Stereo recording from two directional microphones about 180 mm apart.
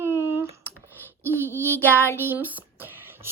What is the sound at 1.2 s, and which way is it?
Speech, 10° right (ahead or behind).